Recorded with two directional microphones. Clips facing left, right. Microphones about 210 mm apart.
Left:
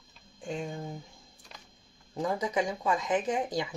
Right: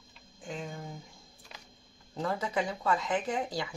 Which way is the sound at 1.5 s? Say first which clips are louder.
Even; 5° right (ahead or behind).